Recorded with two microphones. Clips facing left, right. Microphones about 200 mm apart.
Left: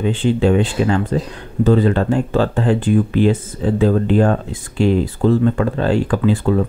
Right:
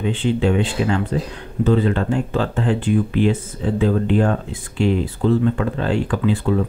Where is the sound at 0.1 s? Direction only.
40° left (ahead or behind).